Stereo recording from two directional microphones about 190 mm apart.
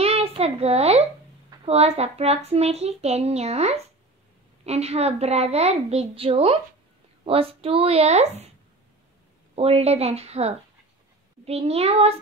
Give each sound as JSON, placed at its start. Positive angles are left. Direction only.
{"t": 0.0, "sound": "a sound", "side_deg": -30}
{"t": 1.6, "sound": "a child's voice", "side_deg": -35}
{"t": 9.6, "sound": "a child's voice", "side_deg": -30}